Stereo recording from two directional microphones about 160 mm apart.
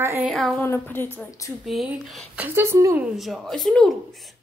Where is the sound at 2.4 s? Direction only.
15° right (ahead or behind).